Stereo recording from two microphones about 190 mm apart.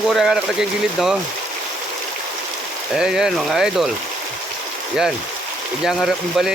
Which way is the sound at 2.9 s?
5° right (ahead or behind).